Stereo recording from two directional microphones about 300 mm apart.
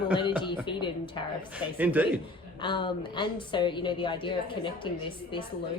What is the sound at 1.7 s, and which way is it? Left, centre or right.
Speech, centre.